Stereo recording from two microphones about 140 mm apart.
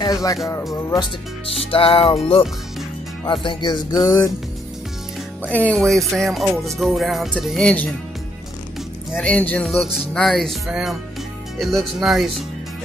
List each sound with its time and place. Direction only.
0.0 s speech: 25° left (ahead or behind)
0.7 s music: 25° left (ahead or behind)
1.6 s music: 40° left (ahead or behind)
3.3 s music: 35° left (ahead or behind)
5.4 s speech: 10° left (ahead or behind)
9.1 s speech: 10° left (ahead or behind)
9.7 s speech: centre (ahead or behind)